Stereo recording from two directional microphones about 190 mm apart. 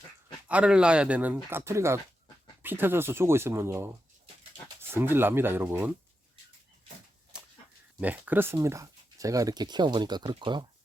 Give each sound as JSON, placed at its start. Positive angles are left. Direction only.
{"t": 0.4, "sound": "speech", "side_deg": -5}
{"t": 8.0, "sound": "speech", "side_deg": -10}